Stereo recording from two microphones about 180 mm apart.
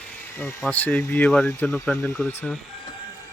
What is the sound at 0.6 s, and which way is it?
Speech, 10° left (ahead or behind).